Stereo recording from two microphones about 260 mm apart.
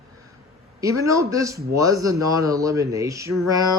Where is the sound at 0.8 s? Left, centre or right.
Centre.